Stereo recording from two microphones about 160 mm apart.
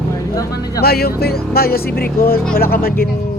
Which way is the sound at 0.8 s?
75° left (ahead or behind).